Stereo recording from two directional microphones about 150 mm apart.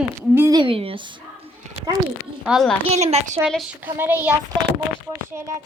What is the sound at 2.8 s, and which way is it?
Speech, 45° right (ahead or behind).